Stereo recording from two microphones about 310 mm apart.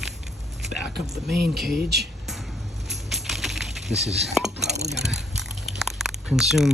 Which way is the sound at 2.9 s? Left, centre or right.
Centre.